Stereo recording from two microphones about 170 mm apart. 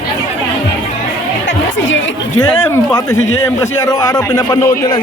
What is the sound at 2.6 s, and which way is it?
A man's voice, 15° left (ahead or behind).